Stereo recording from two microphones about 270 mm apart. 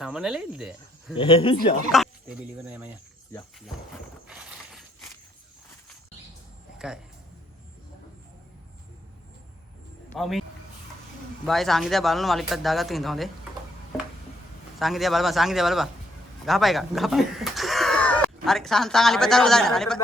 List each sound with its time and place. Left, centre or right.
0.0 s speech: centre
1.1 s speech: centre
1.9 s speech: centre
6.7 s speech: centre
10.1 s a man's voice: centre
11.4 s speech: centre
14.8 s speech: centre